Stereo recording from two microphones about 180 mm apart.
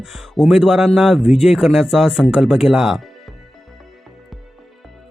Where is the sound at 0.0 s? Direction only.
Centre (ahead or behind).